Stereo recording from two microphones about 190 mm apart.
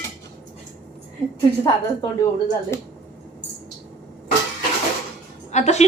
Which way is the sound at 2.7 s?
15° left (ahead or behind).